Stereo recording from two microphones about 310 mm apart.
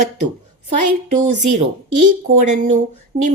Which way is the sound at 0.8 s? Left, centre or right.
Right.